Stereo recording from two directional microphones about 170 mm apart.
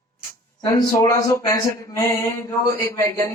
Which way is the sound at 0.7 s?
20° left (ahead or behind).